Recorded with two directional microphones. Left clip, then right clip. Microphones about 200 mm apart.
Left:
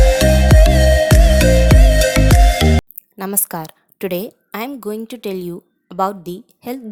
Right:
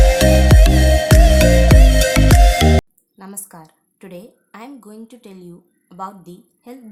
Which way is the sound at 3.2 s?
45° left (ahead or behind).